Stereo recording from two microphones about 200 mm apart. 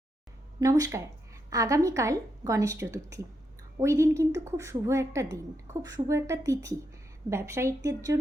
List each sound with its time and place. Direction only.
0.6 s a woman's voice: 15° right (ahead or behind)